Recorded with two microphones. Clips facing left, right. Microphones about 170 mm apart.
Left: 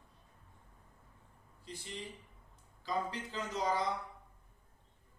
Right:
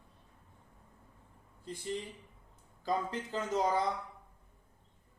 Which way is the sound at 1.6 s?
50° right (ahead or behind).